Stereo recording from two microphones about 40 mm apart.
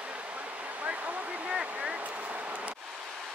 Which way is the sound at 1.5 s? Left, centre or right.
Right.